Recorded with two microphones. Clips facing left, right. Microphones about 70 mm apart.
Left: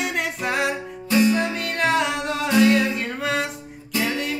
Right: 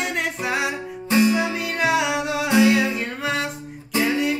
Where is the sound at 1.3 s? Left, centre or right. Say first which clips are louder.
Right 1 dB; centre.